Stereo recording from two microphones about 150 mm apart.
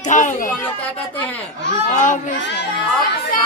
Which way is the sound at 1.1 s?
10° left (ahead or behind).